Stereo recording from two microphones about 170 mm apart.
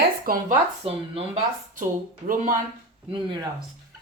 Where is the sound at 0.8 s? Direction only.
35° right (ahead or behind).